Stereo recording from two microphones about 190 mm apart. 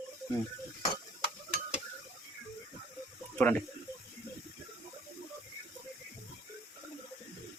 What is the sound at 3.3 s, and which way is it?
Speech, 10° left (ahead or behind).